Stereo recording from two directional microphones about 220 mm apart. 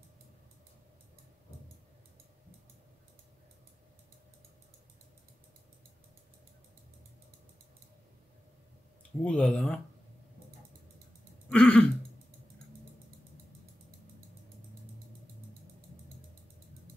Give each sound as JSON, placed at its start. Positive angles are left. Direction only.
{"t": 9.2, "sound": "speech", "side_deg": 5}
{"t": 11.4, "sound": "throat clearing", "side_deg": 5}